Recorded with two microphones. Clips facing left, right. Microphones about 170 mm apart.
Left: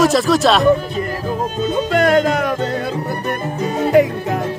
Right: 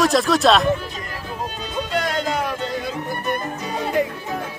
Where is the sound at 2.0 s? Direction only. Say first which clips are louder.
Left 9 dB; 55° left (ahead or behind).